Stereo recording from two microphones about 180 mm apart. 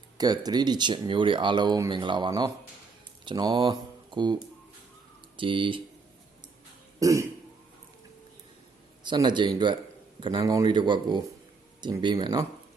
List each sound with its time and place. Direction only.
0.2 s speech: 20° right (ahead or behind)
5.4 s speech: 30° right (ahead or behind)
7.0 s speech: 15° right (ahead or behind)
9.0 s speech: 25° right (ahead or behind)